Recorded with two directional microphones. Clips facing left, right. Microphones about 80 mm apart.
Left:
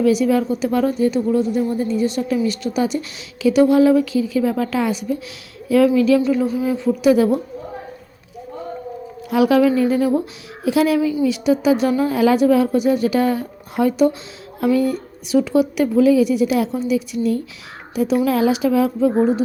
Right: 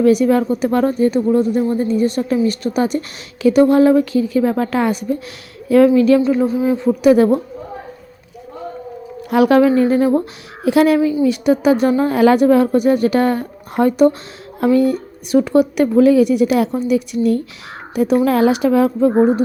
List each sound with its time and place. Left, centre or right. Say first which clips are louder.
0.0 s speech: right 3 dB; right
9.3 s speech: right 3 dB; right
10.6 s speech: right 4 dB; right
11.0 s speech: right 3 dB; right
11.3 s speech: right 2 dB; right
12.1 s a woman's voice: right 3 dB; right